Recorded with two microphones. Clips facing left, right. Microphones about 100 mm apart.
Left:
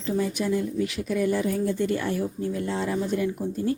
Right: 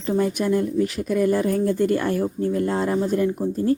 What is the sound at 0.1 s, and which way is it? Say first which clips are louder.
Speech: right 4 dB; 50° right (ahead or behind).